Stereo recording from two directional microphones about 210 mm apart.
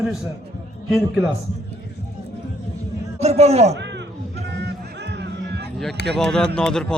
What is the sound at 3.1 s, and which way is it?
Speech, 30° right (ahead or behind).